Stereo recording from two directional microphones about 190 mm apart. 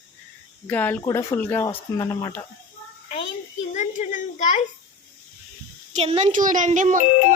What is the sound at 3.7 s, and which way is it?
Speech, 40° left (ahead or behind).